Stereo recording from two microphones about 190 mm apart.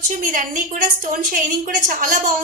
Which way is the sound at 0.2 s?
45° right (ahead or behind).